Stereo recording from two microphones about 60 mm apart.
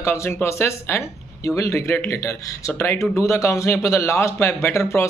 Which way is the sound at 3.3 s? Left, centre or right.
Left.